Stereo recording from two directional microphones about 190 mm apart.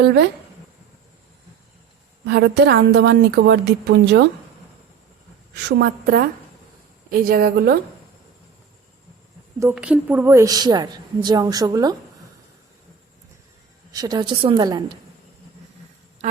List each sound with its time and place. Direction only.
0.0 s a woman's voice: 60° right (ahead or behind)
2.2 s a woman's voice: 60° right (ahead or behind)
5.5 s a woman's voice: 60° right (ahead or behind)
9.7 s a woman's voice: 5° right (ahead or behind)
13.9 s a woman's voice: 20° right (ahead or behind)